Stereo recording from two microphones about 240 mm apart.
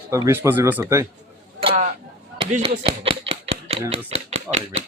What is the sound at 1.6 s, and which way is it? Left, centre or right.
Speech, right.